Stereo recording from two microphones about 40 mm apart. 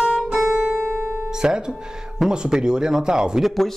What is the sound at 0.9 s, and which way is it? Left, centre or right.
Guitar, right.